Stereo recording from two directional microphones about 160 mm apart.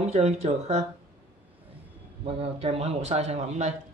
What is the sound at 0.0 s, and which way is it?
Speech, 40° right (ahead or behind).